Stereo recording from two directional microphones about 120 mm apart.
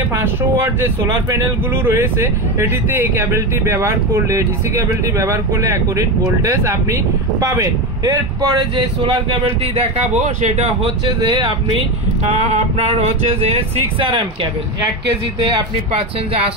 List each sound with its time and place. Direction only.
0.1 s speech: 20° right (ahead or behind)
1.9 s speech: 20° right (ahead or behind); by 9.8 s 45° right (ahead or behind)
9.9 s speech: 65° right (ahead or behind)
11.1 s speech: 35° right (ahead or behind)
12.3 s speech: 55° right (ahead or behind)